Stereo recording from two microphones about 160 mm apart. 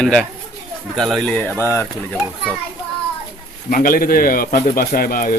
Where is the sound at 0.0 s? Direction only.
5° left (ahead or behind).